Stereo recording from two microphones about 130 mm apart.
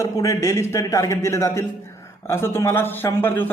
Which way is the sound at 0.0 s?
25° left (ahead or behind).